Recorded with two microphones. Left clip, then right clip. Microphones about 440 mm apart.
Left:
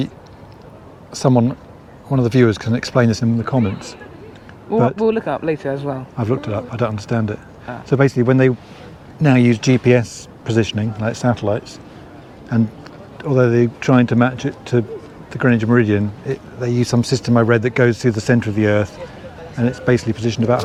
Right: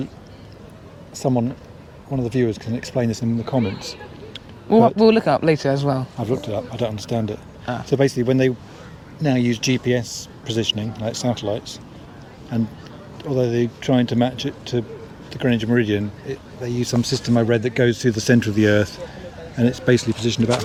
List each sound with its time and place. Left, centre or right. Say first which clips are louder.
1.2 s speech: left 6 dB; left
4.9 s speech: right 3 dB; right
6.1 s speech: left 2 dB; left
13.2 s speech: left 6 dB; left; by 20.6 s centre